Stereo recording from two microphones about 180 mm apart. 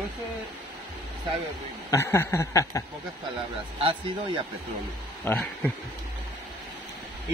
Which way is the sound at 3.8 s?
30° right (ahead or behind).